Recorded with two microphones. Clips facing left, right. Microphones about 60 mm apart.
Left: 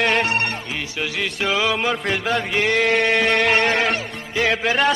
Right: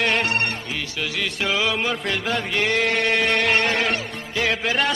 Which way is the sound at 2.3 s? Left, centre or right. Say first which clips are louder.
Left 2 dB; centre.